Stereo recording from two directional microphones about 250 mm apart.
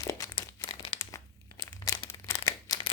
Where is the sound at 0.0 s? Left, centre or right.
Centre.